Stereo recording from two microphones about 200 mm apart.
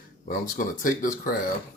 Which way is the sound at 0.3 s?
45° left (ahead or behind).